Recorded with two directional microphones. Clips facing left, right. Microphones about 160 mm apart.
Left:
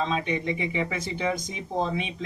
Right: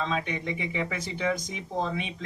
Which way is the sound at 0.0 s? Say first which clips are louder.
Left 3 dB; 25° left (ahead or behind).